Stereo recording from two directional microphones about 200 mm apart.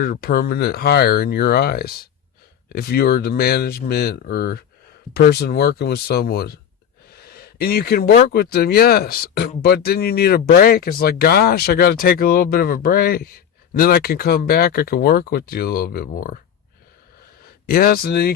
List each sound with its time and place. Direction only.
0.0 s speech: 50° left (ahead or behind)
7.1 s a sound: 50° left (ahead or behind)
8.3 s speech: 50° left (ahead or behind)
17.7 s speech: 50° left (ahead or behind)